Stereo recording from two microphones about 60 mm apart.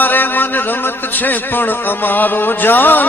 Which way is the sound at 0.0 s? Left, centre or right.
Left.